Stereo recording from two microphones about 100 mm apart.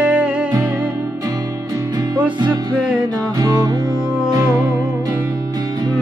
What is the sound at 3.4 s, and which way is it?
Music, 40° right (ahead or behind).